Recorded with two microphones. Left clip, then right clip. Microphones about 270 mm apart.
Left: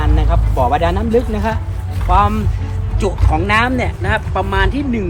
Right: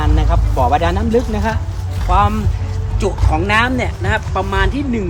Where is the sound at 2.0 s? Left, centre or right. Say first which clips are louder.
Left 1 dB; centre.